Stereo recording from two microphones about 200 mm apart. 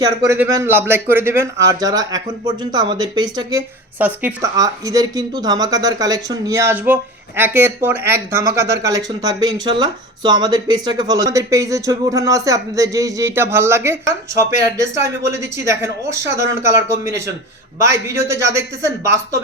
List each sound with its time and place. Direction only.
0.0 s speech: 15° right (ahead or behind)
3.9 s speech: 10° right (ahead or behind)